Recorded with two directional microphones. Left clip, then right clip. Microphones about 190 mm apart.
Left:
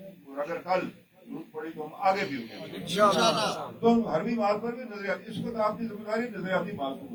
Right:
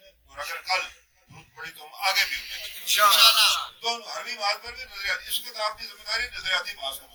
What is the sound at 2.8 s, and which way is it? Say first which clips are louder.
Speech: right 5 dB; 65° left (ahead or behind).